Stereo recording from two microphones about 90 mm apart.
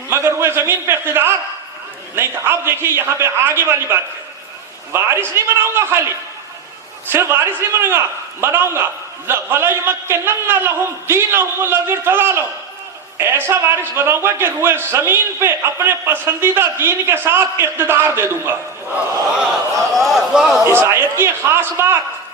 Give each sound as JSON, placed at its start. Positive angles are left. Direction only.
{"t": 0.1, "sound": "a man's voice", "side_deg": -25}
{"t": 20.0, "sound": "a sound", "side_deg": 0}
{"t": 20.7, "sound": "a man's voice", "side_deg": -30}